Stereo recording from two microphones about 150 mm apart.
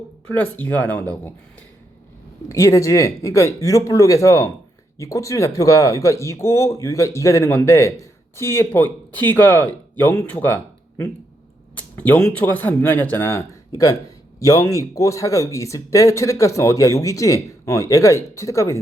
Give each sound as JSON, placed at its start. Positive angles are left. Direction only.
{"t": 0.3, "sound": "speech", "side_deg": 10}
{"t": 2.5, "sound": "speech", "side_deg": 20}